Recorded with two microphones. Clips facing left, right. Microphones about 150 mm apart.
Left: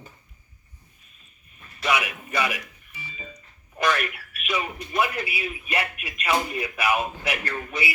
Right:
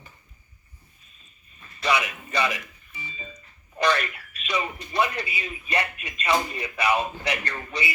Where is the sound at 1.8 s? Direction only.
10° left (ahead or behind).